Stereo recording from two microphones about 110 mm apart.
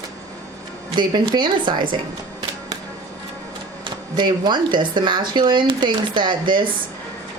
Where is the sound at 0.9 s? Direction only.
45° right (ahead or behind).